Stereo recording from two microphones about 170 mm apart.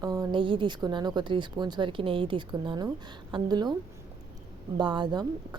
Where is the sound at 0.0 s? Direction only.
25° right (ahead or behind).